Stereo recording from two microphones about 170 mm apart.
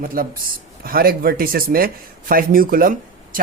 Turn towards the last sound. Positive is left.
turn(degrees=-55)  # may be behind; listen again after turning